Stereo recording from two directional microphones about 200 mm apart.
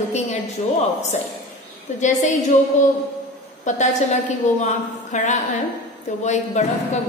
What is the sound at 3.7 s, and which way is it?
A woman's voice, 35° left (ahead or behind).